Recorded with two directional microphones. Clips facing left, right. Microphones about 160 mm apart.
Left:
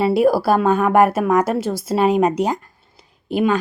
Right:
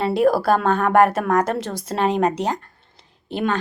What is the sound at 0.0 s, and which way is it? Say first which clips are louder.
A woman's voice: left 2 dB; 10° left (ahead or behind).